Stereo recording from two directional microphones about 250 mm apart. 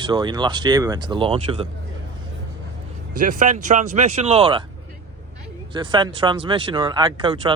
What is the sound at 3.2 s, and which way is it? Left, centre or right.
Speech, right.